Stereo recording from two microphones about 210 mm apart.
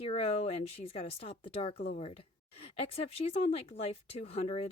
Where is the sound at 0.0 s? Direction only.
30° left (ahead or behind).